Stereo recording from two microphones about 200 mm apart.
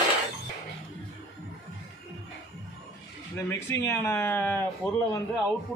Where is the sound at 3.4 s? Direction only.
10° left (ahead or behind).